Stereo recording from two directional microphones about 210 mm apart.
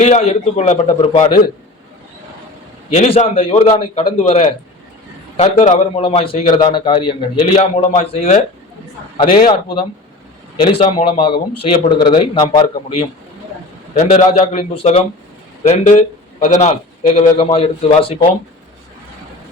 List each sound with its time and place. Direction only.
0.0 s a man's voice: 30° left (ahead or behind)
2.9 s a man's voice: 30° left (ahead or behind)
10.7 s a man's voice: 25° left (ahead or behind)